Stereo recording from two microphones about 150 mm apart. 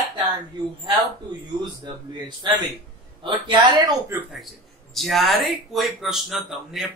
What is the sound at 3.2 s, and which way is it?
Speech, 30° right (ahead or behind).